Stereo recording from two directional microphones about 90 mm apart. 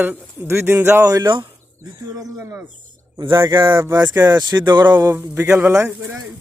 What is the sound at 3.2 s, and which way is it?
Speech, 65° right (ahead or behind).